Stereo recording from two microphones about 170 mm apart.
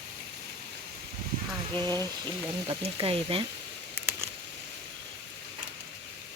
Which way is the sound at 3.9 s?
10° right (ahead or behind).